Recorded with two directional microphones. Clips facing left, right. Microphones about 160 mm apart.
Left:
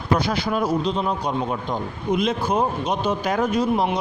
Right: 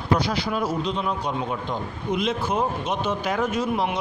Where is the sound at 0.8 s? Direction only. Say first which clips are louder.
Left 3 dB; 35° left (ahead or behind).